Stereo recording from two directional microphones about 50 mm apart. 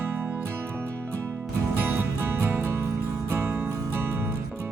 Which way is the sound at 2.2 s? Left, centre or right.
Right.